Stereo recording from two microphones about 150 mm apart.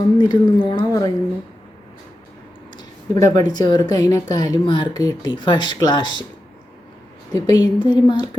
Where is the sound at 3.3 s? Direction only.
25° left (ahead or behind).